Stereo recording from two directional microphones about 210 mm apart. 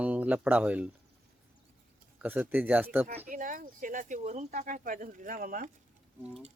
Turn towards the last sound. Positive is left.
turn(degrees=-40)  # may be behind; listen again after turning